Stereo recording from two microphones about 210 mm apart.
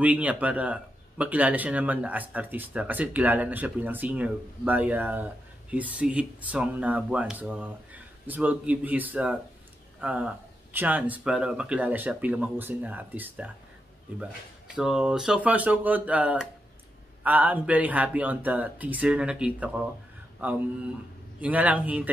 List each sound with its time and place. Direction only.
0.0 s speech: 5° right (ahead or behind)
14.8 s speech: 5° right (ahead or behind)